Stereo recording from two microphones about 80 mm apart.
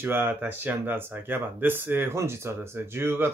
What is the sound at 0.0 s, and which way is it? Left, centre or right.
Speech, right.